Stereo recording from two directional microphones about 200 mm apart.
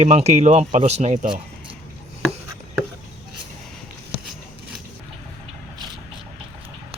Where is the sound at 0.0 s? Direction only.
35° right (ahead or behind).